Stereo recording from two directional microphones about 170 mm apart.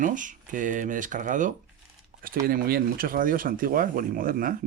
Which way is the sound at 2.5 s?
60° right (ahead or behind).